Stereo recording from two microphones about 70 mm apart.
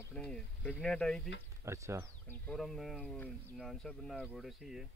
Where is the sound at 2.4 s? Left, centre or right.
Centre.